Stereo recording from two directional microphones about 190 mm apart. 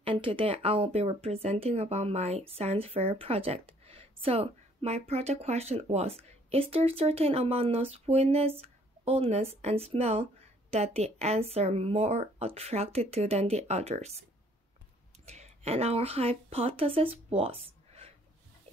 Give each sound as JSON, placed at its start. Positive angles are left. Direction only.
{"t": 0.0, "sound": "speech", "side_deg": -30}
{"t": 15.2, "sound": "speech", "side_deg": -35}